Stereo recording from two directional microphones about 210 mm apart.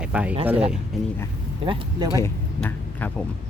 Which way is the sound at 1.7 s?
20° right (ahead or behind).